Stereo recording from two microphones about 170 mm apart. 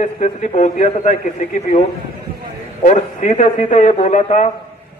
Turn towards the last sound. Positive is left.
turn(degrees=45)  # may be behind; listen again after turning